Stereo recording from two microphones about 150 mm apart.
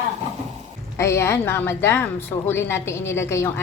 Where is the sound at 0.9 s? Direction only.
20° left (ahead or behind).